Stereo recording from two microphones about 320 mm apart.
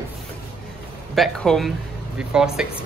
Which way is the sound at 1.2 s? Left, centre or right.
Centre.